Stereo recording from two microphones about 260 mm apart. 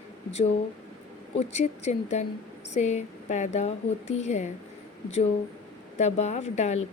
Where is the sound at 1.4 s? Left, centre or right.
Left.